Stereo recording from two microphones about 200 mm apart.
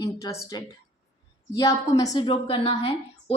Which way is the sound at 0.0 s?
20° left (ahead or behind).